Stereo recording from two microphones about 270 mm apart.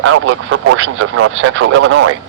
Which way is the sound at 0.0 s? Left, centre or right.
Right.